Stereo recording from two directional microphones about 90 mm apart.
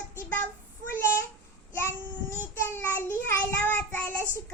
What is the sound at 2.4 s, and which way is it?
Child singing, 25° left (ahead or behind).